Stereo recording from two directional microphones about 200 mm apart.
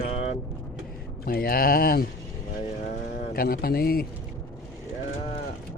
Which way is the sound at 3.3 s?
45° left (ahead or behind).